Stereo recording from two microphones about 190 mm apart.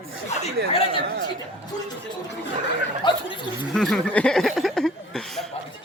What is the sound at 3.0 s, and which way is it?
Speech, 25° left (ahead or behind).